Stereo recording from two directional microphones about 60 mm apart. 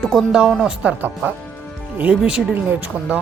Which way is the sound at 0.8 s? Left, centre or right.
Right.